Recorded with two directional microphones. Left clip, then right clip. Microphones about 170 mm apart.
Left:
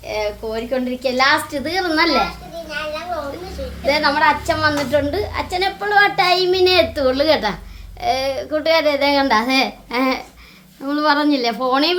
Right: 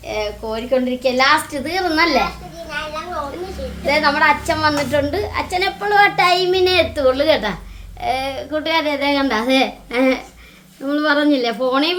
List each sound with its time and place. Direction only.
0.1 s a woman's voice: 5° left (ahead or behind)
3.8 s a woman's voice: 10° left (ahead or behind); by 11.9 s 25° left (ahead or behind)